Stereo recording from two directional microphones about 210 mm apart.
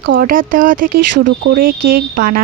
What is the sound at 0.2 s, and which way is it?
Speech, 40° right (ahead or behind).